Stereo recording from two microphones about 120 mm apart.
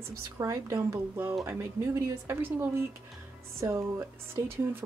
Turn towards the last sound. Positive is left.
turn(degrees=-20)  # may be behind; listen again after turning